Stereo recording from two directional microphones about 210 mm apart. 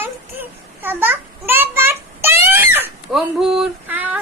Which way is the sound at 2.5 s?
10° right (ahead or behind).